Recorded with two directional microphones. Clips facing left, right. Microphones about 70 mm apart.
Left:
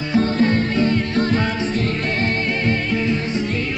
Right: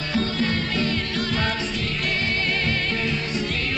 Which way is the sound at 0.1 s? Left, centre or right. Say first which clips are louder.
Left 7 dB; left.